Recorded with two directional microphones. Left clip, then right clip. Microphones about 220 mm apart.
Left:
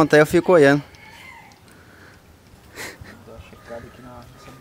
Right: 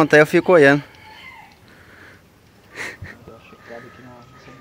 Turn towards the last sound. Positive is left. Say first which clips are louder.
# right 4 dB
turn(degrees=10)  # may be behind; listen again after turning